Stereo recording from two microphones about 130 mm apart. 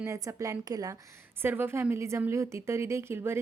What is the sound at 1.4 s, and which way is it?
A woman's voice, 15° right (ahead or behind).